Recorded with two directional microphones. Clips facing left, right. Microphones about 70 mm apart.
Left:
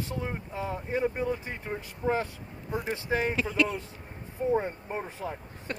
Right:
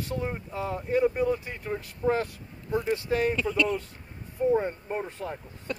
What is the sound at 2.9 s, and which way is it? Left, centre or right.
Speech, left.